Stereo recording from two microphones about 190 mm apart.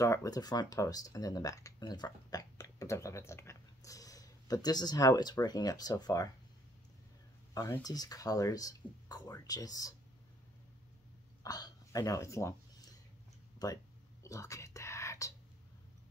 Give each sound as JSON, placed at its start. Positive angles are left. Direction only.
{"t": 0.0, "sound": "speech", "side_deg": 15}
{"t": 7.5, "sound": "speech", "side_deg": 15}
{"t": 11.4, "sound": "a sound", "side_deg": 20}
{"t": 13.6, "sound": "speech", "side_deg": 20}
{"t": 14.2, "sound": "whispering", "side_deg": 15}